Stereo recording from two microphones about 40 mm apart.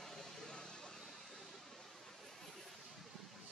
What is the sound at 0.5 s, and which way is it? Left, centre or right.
Vehicle, left.